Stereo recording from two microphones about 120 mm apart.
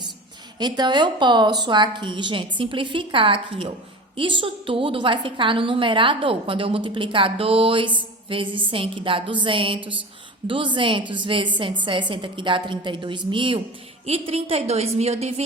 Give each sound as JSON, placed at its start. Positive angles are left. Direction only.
{"t": 0.6, "sound": "a woman's voice", "side_deg": -35}
{"t": 14.0, "sound": "a woman's voice", "side_deg": -60}